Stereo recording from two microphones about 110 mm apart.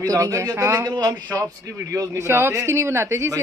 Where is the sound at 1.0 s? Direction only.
40° right (ahead or behind).